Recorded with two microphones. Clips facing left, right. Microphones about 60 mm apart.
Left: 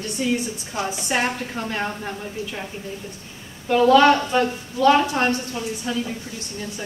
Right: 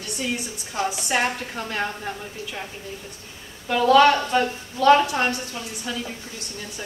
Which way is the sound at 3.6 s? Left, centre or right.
Centre.